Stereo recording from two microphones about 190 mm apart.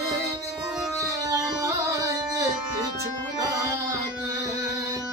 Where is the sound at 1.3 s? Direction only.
15° right (ahead or behind).